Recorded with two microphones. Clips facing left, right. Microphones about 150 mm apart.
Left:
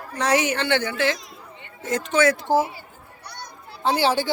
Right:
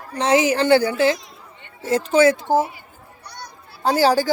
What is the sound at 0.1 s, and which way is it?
Speech, 25° right (ahead or behind).